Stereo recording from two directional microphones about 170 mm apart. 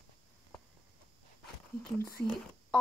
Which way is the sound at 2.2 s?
10° left (ahead or behind).